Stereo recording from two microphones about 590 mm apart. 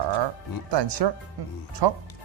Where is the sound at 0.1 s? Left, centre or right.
Right.